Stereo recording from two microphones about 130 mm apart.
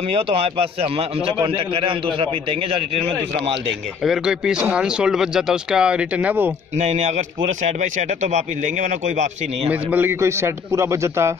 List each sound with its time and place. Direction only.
0.1 s a man's voice: 50° right (ahead or behind)
4.0 s speech: 5° right (ahead or behind)
6.8 s a man's voice: 65° right (ahead or behind)
9.7 s a man's voice: 10° right (ahead or behind)